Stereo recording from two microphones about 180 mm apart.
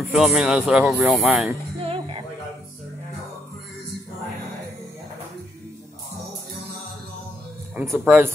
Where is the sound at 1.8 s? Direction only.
30° right (ahead or behind).